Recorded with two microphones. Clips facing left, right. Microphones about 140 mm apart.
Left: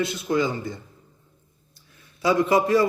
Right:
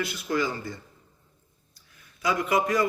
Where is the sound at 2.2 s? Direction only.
30° left (ahead or behind).